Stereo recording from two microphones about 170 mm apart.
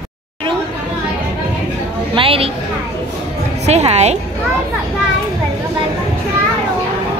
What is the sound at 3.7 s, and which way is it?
Speech, 40° right (ahead or behind).